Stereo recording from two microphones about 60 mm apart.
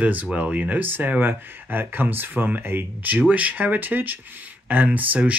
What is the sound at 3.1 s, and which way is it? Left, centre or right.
Speech, right.